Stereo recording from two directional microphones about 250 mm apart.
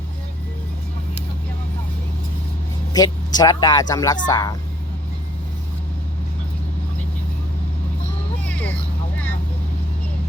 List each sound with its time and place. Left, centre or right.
2.9 s speech: centre